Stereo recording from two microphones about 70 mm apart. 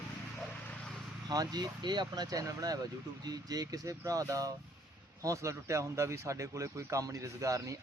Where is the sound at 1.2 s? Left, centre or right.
Right.